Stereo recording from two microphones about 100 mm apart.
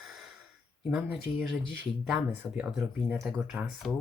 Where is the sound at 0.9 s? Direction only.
10° right (ahead or behind).